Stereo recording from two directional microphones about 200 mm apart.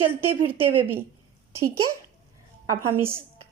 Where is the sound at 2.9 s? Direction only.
10° right (ahead or behind).